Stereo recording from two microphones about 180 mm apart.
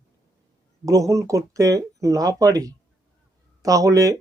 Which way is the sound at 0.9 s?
20° right (ahead or behind).